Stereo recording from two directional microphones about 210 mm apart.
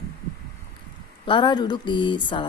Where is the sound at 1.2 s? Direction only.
20° left (ahead or behind).